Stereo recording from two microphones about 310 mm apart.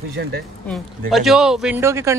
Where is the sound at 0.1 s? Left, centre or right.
Right.